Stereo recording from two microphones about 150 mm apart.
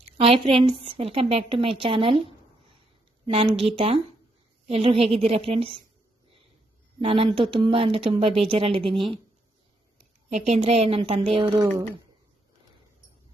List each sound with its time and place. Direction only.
0.2 s a woman's voice: 40° right (ahead or behind)
3.3 s a woman's voice: 40° right (ahead or behind)
7.0 s a woman's voice: 40° right (ahead or behind)
10.2 s a woman's voice: 50° right (ahead or behind)